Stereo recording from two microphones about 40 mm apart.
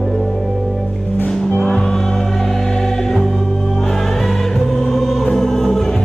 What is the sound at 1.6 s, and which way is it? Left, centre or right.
Music, centre.